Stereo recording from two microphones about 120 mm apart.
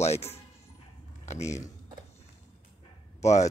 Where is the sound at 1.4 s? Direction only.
25° left (ahead or behind).